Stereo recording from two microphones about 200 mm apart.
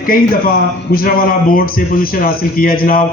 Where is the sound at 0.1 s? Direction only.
45° left (ahead or behind).